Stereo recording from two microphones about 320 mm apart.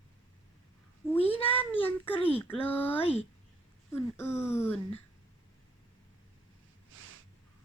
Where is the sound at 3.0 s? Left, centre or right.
Centre.